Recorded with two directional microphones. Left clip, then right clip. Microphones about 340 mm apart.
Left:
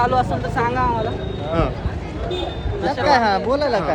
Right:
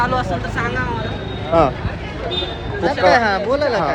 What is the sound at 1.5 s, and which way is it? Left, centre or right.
Speech, centre.